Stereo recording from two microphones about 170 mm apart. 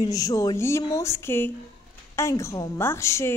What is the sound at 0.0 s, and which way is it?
A woman's voice, 20° left (ahead or behind).